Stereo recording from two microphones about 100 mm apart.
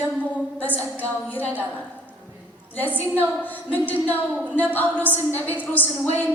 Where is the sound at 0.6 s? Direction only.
15° left (ahead or behind).